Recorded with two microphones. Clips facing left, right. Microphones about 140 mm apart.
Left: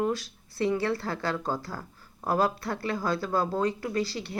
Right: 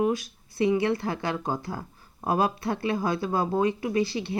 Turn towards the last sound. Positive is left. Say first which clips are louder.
# right 4 dB
turn(degrees=-20)  # may be behind; listen again after turning